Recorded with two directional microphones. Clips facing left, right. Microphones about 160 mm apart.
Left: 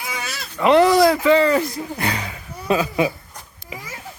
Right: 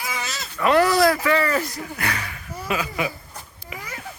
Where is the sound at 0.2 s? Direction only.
10° left (ahead or behind).